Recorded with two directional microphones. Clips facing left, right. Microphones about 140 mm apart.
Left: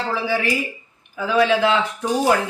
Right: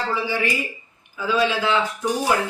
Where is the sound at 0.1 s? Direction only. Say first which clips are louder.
Left 5 dB; 80° left.